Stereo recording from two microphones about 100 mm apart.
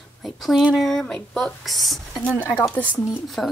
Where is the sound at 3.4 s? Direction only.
5° left (ahead or behind).